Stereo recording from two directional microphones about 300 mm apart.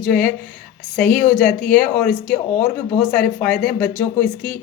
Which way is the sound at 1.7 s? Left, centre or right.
Centre.